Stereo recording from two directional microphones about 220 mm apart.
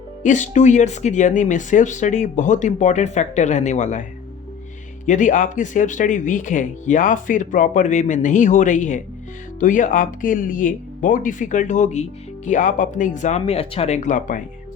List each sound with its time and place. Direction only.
0.2 s speech: 35° left (ahead or behind)
5.0 s speech: 35° left (ahead or behind)